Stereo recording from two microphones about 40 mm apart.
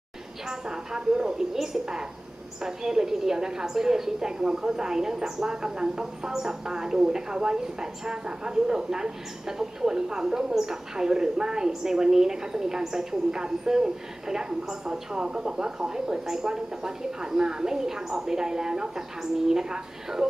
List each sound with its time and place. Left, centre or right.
0.5 s a woman's voice: centre